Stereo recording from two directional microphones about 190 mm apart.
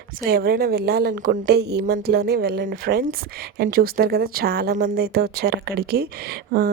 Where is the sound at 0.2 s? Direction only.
55° right (ahead or behind).